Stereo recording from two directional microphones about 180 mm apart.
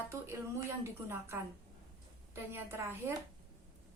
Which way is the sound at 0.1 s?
15° right (ahead or behind).